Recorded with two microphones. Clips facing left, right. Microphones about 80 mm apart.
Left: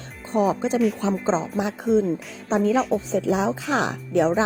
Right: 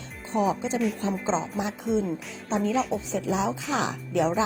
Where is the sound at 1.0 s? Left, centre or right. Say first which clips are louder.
Left 5 dB; left.